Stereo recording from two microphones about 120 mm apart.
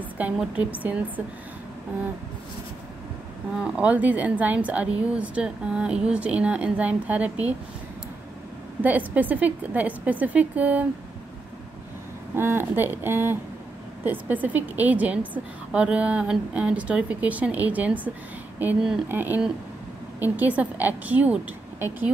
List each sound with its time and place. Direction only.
0.2 s a woman's voice: 10° right (ahead or behind)
3.5 s a woman's voice: 10° right (ahead or behind)
8.8 s a woman's voice: 15° right (ahead or behind)
12.4 s a woman's voice: 20° right (ahead or behind)
19.0 s a woman's voice: 15° right (ahead or behind)